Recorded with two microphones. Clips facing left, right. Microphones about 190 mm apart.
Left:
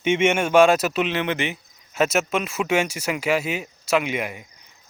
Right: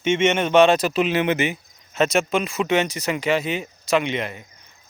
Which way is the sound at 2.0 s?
5° left (ahead or behind).